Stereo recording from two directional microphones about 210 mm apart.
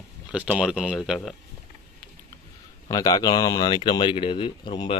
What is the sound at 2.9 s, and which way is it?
Speech, 15° left (ahead or behind).